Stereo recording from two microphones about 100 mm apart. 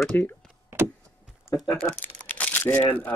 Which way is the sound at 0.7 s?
25° right (ahead or behind).